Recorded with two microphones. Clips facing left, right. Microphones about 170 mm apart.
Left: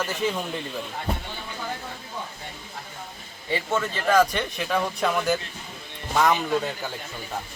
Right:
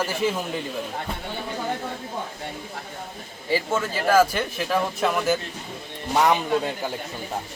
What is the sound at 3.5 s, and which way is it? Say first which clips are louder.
Speech: right 2 dB; 5° right (ahead or behind).